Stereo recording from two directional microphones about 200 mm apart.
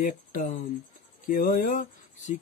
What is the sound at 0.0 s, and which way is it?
Speech, 40° left (ahead or behind).